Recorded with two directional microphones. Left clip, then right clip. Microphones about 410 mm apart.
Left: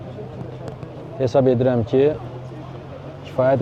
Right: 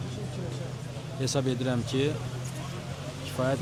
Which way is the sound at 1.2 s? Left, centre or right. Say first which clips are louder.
Left 14 dB; centre.